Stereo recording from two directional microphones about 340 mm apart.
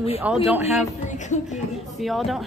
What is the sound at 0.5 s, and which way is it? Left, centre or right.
Speech, centre.